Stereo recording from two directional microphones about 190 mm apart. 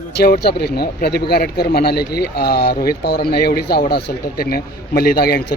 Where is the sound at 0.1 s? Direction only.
60° left (ahead or behind).